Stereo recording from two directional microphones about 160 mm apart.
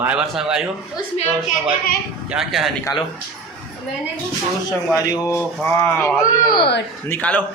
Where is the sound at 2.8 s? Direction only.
25° left (ahead or behind).